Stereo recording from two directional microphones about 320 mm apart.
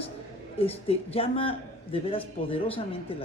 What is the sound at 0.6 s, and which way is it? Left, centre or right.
Speech, centre.